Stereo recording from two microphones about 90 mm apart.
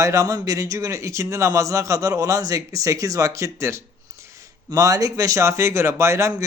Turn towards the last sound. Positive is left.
turn(degrees=-30)  # may be behind; listen again after turning